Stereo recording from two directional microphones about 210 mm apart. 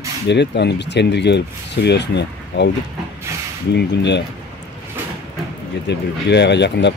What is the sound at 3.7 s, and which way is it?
Speech, 55° left (ahead or behind).